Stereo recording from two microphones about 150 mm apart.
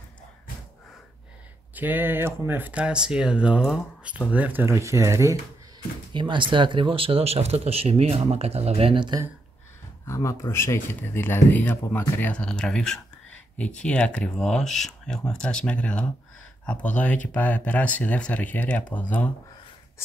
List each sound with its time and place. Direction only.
1.8 s speech: 10° right (ahead or behind)
6.1 s speech: 30° right (ahead or behind)
10.0 s speech: 20° left (ahead or behind)